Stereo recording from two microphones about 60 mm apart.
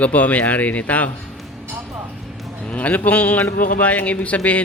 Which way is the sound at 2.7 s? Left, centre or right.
Left.